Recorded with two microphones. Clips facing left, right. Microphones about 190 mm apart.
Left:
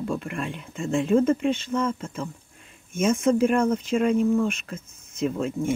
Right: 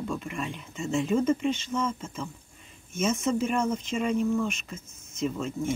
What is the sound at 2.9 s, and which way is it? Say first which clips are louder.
Speech: left 5 dB; 55° left (ahead or behind).